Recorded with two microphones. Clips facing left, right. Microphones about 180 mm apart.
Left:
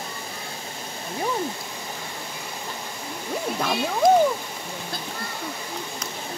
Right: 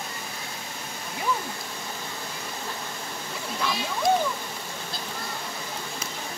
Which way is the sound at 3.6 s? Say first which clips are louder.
Left 6 dB; 55° left (ahead or behind).